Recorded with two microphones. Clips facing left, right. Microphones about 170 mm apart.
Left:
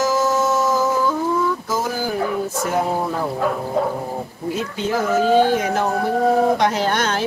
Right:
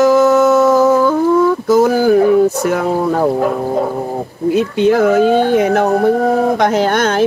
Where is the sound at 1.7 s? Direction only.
65° right (ahead or behind).